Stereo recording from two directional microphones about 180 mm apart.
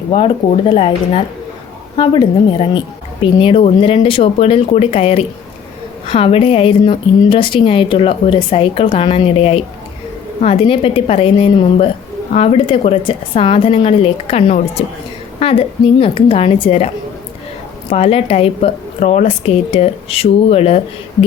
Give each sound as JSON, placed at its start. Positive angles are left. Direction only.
{"t": 0.1, "sound": "a woman's voice", "side_deg": 30}